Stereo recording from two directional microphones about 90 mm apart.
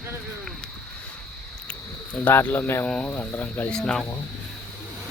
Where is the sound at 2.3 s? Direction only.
20° left (ahead or behind).